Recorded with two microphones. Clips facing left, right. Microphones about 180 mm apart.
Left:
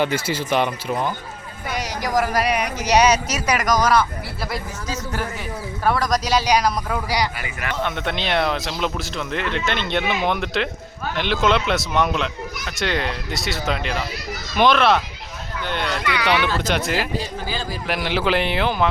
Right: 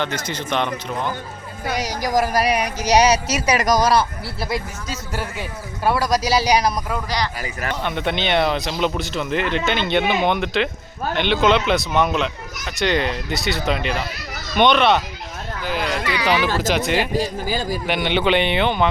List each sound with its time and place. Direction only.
0.0 s speech: 10° left (ahead or behind)
1.6 s speech: 35° right (ahead or behind)
5.8 s speech: 10° right (ahead or behind)
6.9 s speech: 10° left (ahead or behind)
7.4 s speech: 35° right (ahead or behind)
7.8 s speech: centre (ahead or behind)
17.5 s a man's voice: 45° right (ahead or behind)
17.8 s speech: centre (ahead or behind)